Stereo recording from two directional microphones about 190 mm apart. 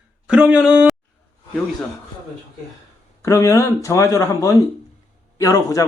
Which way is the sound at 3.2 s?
15° left (ahead or behind).